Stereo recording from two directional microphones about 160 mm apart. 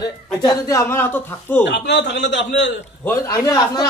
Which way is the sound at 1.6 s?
90° left.